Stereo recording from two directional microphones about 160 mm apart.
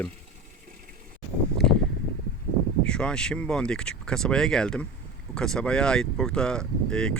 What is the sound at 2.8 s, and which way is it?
Speech, 5° left (ahead or behind).